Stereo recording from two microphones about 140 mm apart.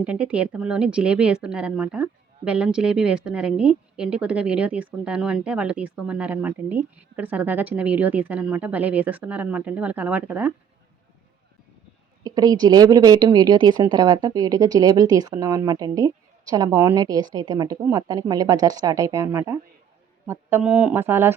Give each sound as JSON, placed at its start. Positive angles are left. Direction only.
{"t": 0.0, "sound": "speech", "side_deg": -10}
{"t": 12.2, "sound": "a woman's voice", "side_deg": -30}